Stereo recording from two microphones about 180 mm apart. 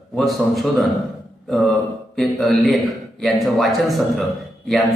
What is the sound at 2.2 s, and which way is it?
A man's voice, centre (ahead or behind).